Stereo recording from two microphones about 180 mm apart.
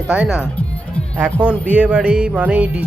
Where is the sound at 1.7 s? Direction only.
5° right (ahead or behind).